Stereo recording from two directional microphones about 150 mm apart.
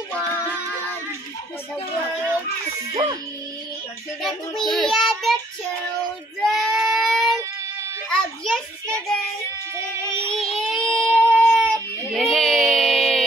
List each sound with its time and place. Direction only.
2.9 s music: 25° right (ahead or behind)
4.2 s child singing: centre (ahead or behind)
6.4 s a sound: centre (ahead or behind)
10.2 s child singing: 40° left (ahead or behind)
10.7 s child singing: 5° left (ahead or behind)